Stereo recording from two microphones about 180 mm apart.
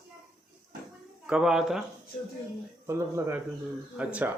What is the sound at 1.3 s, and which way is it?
Speech, 5° right (ahead or behind).